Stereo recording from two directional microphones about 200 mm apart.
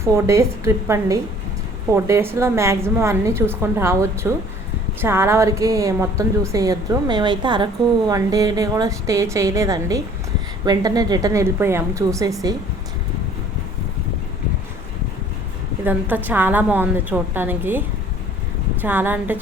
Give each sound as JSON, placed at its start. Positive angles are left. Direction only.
{"t": 0.0, "sound": "a woman's voice", "side_deg": -15}
{"t": 15.8, "sound": "a woman's voice", "side_deg": -10}